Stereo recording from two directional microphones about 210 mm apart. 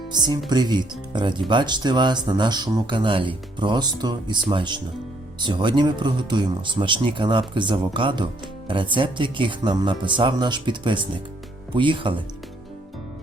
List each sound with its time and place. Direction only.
0.1 s speech: 20° right (ahead or behind)